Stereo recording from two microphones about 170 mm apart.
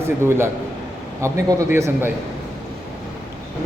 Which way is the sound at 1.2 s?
20° right (ahead or behind).